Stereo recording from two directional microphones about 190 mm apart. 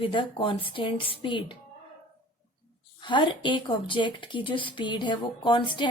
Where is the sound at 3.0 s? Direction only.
25° left (ahead or behind).